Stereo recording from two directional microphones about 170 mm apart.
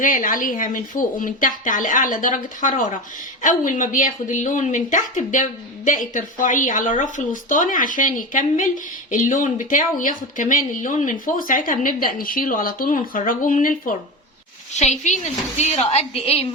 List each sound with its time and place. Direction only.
0.0 s speech: 50° left (ahead or behind)
14.7 s speech: 45° left (ahead or behind)